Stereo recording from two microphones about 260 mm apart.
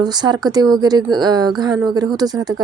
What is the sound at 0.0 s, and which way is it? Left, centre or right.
A woman's voice, centre.